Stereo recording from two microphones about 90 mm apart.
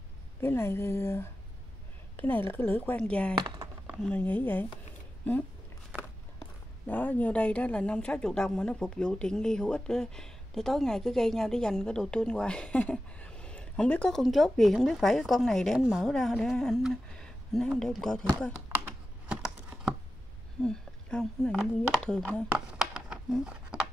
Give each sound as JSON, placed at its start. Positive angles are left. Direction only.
{"t": 0.4, "sound": "speech", "side_deg": 30}
{"t": 6.9, "sound": "speech", "side_deg": 20}
{"t": 14.1, "sound": "speech", "side_deg": 0}
{"t": 19.2, "sound": "a sound", "side_deg": -10}
{"t": 20.6, "sound": "speech", "side_deg": 10}
{"t": 22.8, "sound": "a sound", "side_deg": -5}